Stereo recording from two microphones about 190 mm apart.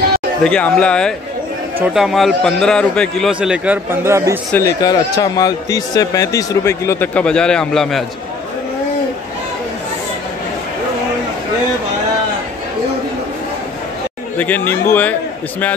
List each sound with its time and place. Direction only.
0.4 s a man's voice: 5° left (ahead or behind); by 4.4 s 15° right (ahead or behind)
4.5 s speech: 15° left (ahead or behind)
14.4 s speech: 10° left (ahead or behind)